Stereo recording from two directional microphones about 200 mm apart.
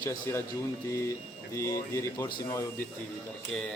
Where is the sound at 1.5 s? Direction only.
15° left (ahead or behind).